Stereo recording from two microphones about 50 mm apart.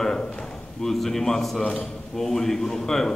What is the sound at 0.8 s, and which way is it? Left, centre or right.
A man's voice, centre.